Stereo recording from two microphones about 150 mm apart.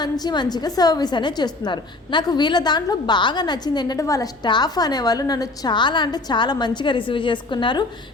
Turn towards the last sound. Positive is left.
turn(degrees=30)  # may be behind; listen again after turning